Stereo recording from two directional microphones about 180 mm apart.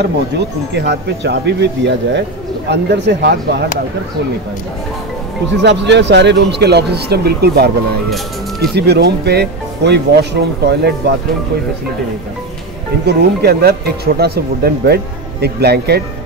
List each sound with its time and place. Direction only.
0.7 s speech: 70° right (ahead or behind)
5.6 s speech: 70° right (ahead or behind)
13.0 s speech: 60° right (ahead or behind)